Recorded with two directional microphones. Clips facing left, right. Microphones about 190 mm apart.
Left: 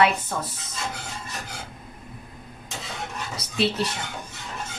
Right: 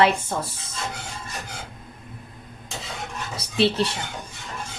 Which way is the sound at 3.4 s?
30° right (ahead or behind).